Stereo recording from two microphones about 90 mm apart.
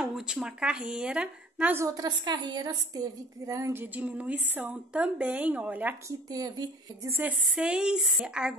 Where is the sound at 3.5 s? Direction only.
35° right (ahead or behind).